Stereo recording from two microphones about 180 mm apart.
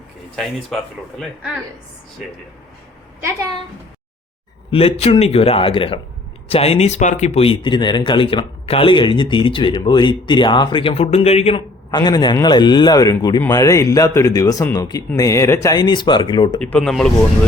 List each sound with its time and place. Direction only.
4.7 s a man's voice: 30° left (ahead or behind)
11.9 s speech: 25° left (ahead or behind)
16.6 s speech: 5° left (ahead or behind)